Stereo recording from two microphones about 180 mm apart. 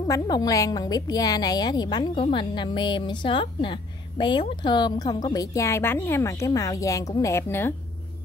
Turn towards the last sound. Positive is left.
turn(degrees=15)  # may be behind; listen again after turning